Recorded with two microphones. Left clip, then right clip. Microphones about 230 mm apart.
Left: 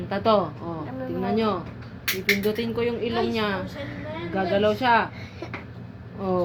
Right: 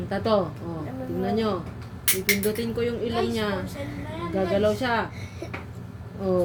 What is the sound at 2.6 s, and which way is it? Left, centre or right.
Speech, right.